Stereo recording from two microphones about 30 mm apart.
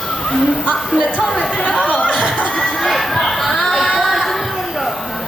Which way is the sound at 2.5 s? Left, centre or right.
Left.